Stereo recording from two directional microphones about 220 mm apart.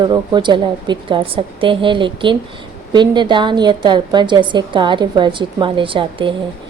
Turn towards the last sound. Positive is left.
turn(degrees=-25)  # may be behind; listen again after turning